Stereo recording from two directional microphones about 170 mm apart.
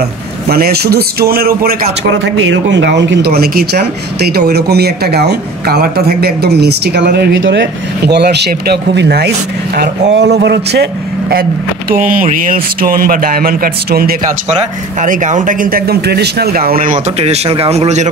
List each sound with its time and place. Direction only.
0.5 s a man's voice: 65° right (ahead or behind)
10.1 s a man's voice: 85° right
11.9 s speech: 50° right (ahead or behind)
14.5 s speech: 45° right (ahead or behind)
17.2 s a man's voice: 35° right (ahead or behind)